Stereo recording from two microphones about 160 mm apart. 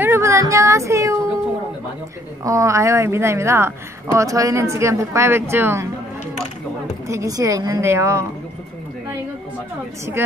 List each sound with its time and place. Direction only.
0.0 s speech: 15° right (ahead or behind)
2.4 s a woman's voice: 20° right (ahead or behind)
7.1 s a woman's voice: 20° right (ahead or behind)
10.2 s a woman's voice: 15° right (ahead or behind)